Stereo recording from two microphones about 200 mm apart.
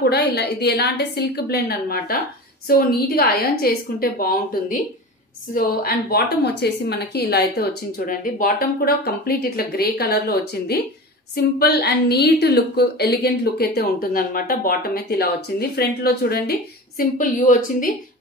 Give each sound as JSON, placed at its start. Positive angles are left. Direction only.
{"t": 0.0, "sound": "a woman's voice", "side_deg": 55}
{"t": 17.0, "sound": "speech", "side_deg": 40}